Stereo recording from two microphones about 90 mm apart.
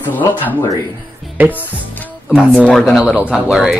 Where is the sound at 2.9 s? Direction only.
5° right (ahead or behind).